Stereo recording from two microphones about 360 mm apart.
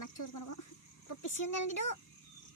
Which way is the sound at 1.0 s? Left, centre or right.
Left.